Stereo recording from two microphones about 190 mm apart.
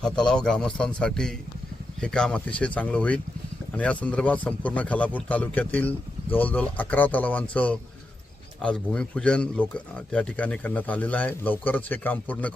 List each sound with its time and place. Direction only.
0.0 s a man's voice: 5° left (ahead or behind)